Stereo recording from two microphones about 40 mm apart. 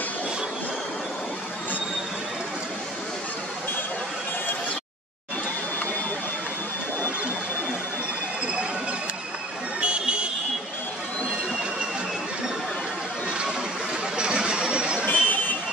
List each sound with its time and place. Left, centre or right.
9.8 s buzzer: right
14.1 s a sound: right
15.0 s vehicle: left